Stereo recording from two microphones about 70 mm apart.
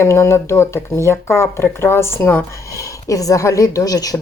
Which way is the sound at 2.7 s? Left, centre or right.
Left.